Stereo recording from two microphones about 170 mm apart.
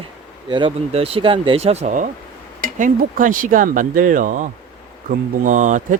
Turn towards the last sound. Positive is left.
turn(degrees=-45)  # may be behind; listen again after turning